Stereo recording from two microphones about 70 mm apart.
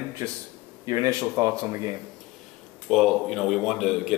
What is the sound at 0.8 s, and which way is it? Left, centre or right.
Speech, right.